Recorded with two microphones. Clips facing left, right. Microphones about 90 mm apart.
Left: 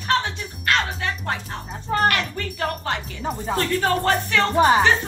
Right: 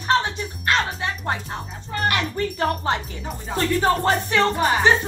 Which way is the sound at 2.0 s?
25° right (ahead or behind).